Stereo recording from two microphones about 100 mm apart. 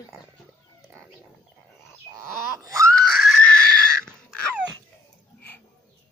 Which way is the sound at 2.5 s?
30° right (ahead or behind).